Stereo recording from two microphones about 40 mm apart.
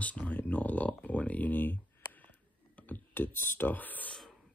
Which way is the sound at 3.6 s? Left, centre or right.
Left.